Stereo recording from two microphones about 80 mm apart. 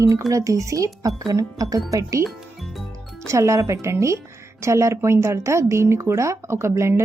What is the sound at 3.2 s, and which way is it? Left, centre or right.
A woman's voice, right.